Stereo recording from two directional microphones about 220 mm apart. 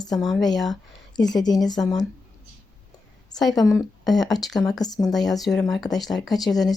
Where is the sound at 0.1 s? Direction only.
Centre (ahead or behind).